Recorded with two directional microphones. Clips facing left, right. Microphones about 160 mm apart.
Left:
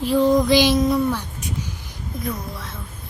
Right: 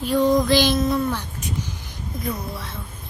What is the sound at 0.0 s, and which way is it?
Female singing, 5° left (ahead or behind).